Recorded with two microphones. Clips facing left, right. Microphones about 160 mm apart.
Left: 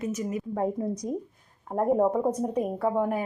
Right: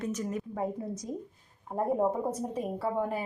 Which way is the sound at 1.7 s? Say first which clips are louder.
Left 4 dB; 85° left.